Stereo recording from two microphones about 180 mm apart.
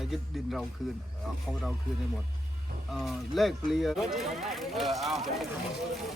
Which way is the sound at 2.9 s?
Centre (ahead or behind).